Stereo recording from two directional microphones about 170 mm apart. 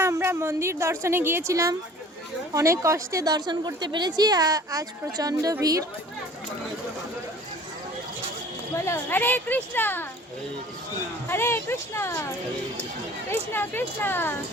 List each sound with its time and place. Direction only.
0.0 s a woman's voice: 15° right (ahead or behind)
8.7 s speech: 15° left (ahead or behind)
11.3 s speech: 15° left (ahead or behind)
13.3 s speech: 10° left (ahead or behind)